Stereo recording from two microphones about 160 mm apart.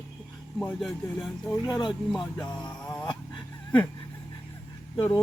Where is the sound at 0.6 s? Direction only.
Centre (ahead or behind).